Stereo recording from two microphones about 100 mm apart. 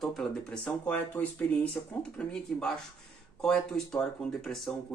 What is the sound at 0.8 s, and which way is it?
Speech, 15° left (ahead or behind).